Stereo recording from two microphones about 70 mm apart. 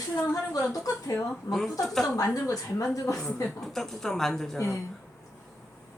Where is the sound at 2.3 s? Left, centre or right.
Left.